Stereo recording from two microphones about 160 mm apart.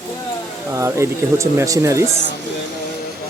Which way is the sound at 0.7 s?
20° right (ahead or behind).